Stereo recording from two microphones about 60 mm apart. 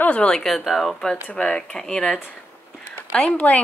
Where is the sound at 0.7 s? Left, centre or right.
Centre.